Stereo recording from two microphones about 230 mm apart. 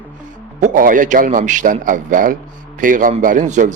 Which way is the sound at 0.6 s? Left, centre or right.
Right.